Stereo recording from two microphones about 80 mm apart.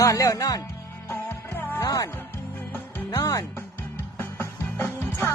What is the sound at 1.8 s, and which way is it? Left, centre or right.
Music, left.